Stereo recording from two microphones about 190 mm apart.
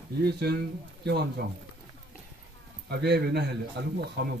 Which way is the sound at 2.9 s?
60° right (ahead or behind).